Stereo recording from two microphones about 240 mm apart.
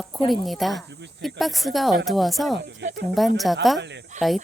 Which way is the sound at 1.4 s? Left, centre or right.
Centre.